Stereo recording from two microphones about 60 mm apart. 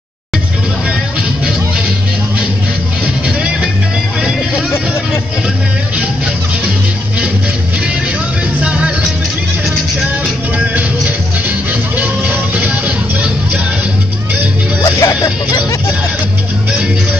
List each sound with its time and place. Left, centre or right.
8.6 s music: centre
12.0 s music: right
14.8 s music: left